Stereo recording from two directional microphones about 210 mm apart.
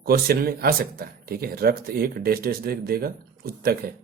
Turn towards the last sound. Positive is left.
turn(degrees=-45)  # may be behind; listen again after turning